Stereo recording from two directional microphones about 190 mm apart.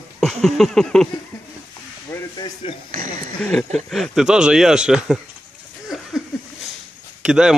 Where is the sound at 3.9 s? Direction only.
Centre (ahead or behind).